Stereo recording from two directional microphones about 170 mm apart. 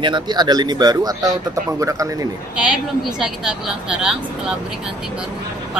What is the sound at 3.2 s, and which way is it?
Speech, 5° right (ahead or behind).